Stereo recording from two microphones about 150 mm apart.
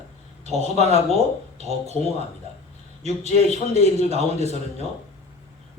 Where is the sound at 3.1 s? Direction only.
45° left (ahead or behind).